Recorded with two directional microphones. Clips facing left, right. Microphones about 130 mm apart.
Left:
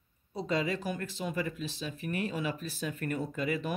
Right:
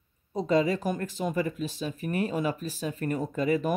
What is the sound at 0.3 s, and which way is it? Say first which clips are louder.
Speech: right 7 dB; 40° right (ahead or behind).